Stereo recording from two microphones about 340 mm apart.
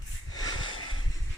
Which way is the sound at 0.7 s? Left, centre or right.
Left.